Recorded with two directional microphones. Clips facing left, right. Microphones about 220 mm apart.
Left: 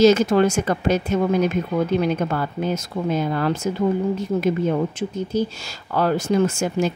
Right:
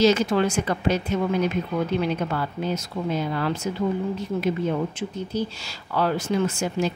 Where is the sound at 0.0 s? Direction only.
45° left (ahead or behind).